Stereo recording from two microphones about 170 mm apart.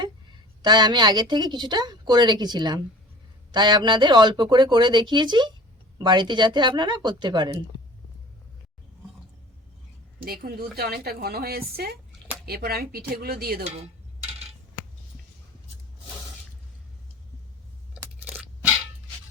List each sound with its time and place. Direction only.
0.6 s a woman's voice: 25° right (ahead or behind)
10.4 s a woman's voice: 65° right (ahead or behind)
18.0 s crunch: 10° right (ahead or behind)